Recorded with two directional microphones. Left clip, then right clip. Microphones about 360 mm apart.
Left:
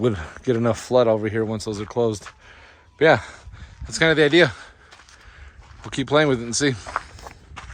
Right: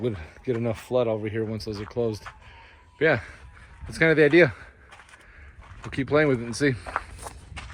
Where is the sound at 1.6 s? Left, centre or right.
Left.